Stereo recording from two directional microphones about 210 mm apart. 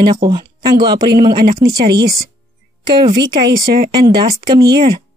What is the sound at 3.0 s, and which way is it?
Speech, 20° right (ahead or behind).